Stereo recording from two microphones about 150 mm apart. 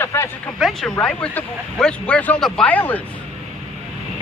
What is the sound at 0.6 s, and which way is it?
Speech, centre (ahead or behind).